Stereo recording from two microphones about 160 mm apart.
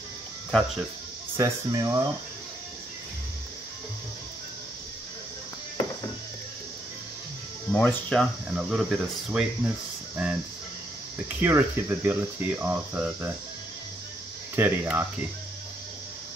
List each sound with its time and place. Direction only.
1.3 s speech: 20° right (ahead or behind)
7.7 s speech: 5° left (ahead or behind); by 13.3 s 10° right (ahead or behind)
14.5 s speech: 15° right (ahead or behind)